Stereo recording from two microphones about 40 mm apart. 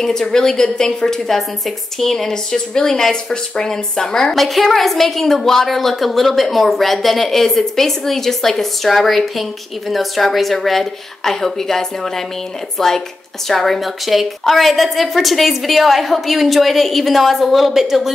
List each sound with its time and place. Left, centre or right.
0.0 s a woman's voice: centre
4.4 s a woman's voice: centre